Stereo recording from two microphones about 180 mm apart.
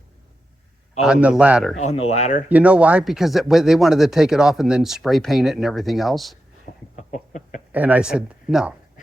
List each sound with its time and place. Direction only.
1.0 s speech: 5° right (ahead or behind)
1.8 s speech: 35° left (ahead or behind)
2.5 s speech: 5° right (ahead or behind)
6.9 s a sound: 45° left (ahead or behind)
7.7 s speech: 10° right (ahead or behind)